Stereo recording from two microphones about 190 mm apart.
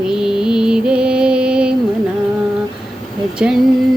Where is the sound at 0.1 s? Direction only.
5° right (ahead or behind).